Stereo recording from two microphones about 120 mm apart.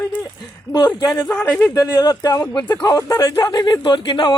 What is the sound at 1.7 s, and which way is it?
Speech, 35° left (ahead or behind).